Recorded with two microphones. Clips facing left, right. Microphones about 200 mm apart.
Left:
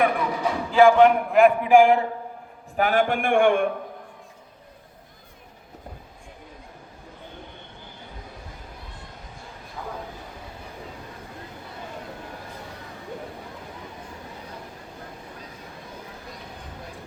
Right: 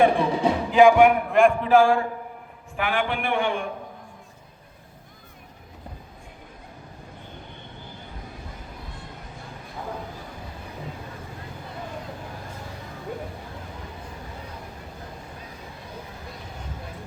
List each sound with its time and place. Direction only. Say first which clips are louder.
0.0 s speech: right 4 dB; 30° right (ahead or behind); by 1.5 s centre (ahead or behind)
1.6 s a man's voice: left 2 dB; 15° left (ahead or behind)
2.7 s a man's voice: left 4 dB; 40° left (ahead or behind)